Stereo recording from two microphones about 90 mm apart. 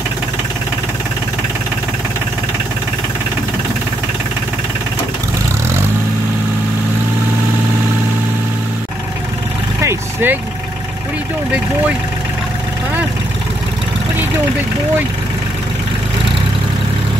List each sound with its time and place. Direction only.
9.8 s vehicle: 30° right (ahead or behind)